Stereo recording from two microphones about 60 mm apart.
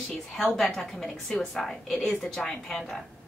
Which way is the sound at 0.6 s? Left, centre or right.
Centre.